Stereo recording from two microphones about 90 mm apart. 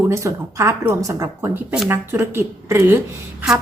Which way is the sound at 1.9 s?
25° right (ahead or behind).